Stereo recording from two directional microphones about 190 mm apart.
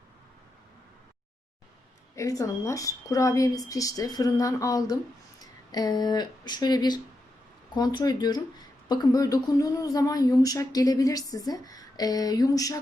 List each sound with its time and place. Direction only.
2.1 s a woman's voice: 15° left (ahead or behind)